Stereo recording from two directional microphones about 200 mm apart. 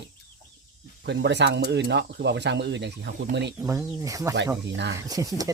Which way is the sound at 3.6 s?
15° right (ahead or behind).